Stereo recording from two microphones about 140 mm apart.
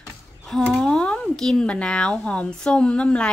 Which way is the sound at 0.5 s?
5° left (ahead or behind).